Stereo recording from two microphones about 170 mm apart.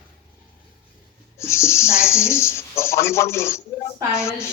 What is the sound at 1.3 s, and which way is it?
Speech, 15° left (ahead or behind).